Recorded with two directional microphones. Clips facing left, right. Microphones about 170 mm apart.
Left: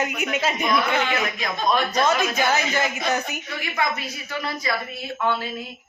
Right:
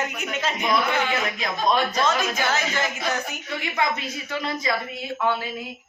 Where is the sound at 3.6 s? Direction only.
20° right (ahead or behind).